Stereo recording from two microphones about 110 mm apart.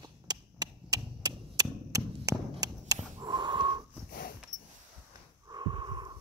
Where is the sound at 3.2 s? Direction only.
40° right (ahead or behind).